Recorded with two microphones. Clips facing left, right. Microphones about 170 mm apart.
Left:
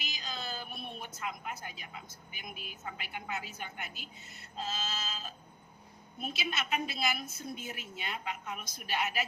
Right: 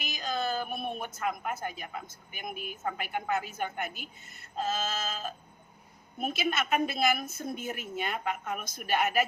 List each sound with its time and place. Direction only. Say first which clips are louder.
0.0 s a woman's voice: right 9 dB; 50° right (ahead or behind)